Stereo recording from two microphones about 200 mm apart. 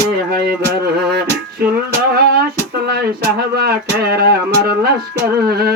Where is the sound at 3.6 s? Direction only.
50° right (ahead or behind).